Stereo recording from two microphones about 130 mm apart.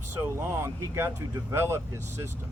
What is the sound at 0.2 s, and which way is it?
Speech, 20° right (ahead or behind).